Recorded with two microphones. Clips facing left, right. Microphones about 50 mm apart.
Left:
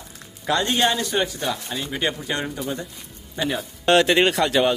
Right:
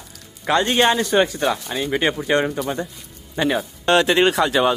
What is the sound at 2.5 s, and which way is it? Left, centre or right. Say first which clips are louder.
Speech: right 4 dB; right.